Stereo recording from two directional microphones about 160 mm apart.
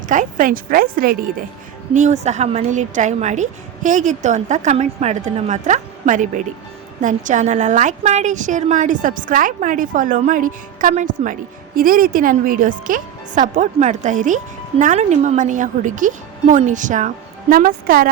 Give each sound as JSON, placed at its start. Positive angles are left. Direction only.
{"t": 0.1, "sound": "speech", "side_deg": -55}
{"t": 1.9, "sound": "speech", "side_deg": -50}
{"t": 17.5, "sound": "speech", "side_deg": -60}